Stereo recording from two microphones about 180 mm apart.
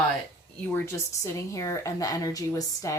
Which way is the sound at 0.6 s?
15° left (ahead or behind).